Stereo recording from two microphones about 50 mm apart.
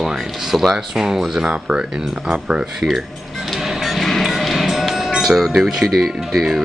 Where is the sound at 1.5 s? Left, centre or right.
Right.